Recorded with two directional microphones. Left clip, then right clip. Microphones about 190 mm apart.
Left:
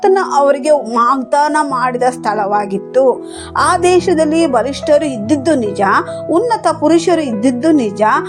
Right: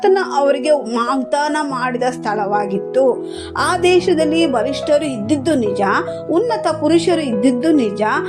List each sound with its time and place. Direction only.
0.0 s a woman's voice: 20° left (ahead or behind)